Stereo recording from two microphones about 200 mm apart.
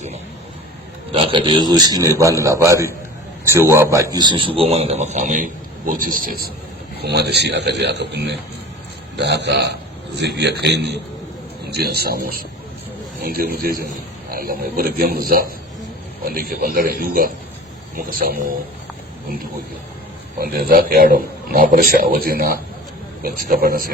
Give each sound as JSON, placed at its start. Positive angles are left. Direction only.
{"t": 1.1, "sound": "a man's voice", "side_deg": -25}
{"t": 20.4, "sound": "a man's voice", "side_deg": -45}